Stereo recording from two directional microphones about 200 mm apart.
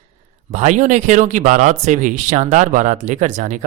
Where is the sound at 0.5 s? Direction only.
40° right (ahead or behind).